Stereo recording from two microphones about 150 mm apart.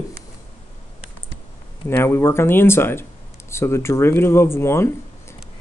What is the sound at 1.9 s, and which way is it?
Speech, 15° left (ahead or behind).